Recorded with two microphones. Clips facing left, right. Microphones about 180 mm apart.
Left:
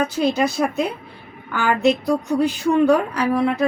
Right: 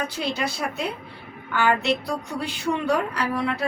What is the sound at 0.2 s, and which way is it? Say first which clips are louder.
A woman's voice: left 9 dB; 45° left (ahead or behind).